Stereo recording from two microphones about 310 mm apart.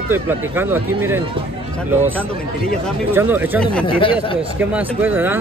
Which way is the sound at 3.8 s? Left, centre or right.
Centre.